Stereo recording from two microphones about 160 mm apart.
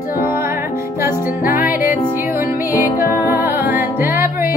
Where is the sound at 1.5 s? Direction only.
10° right (ahead or behind).